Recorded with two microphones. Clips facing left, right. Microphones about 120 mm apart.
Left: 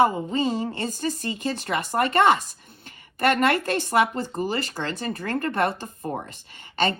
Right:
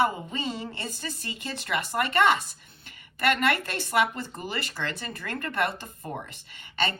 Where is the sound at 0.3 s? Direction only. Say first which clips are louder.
Left 8 dB; 50° left (ahead or behind).